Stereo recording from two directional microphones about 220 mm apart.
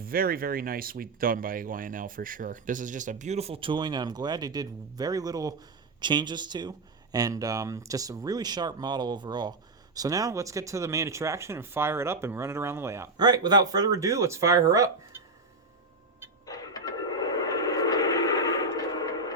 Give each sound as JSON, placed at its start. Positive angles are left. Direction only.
{"t": 0.0, "sound": "speech", "side_deg": -40}
{"t": 16.5, "sound": "train", "side_deg": 15}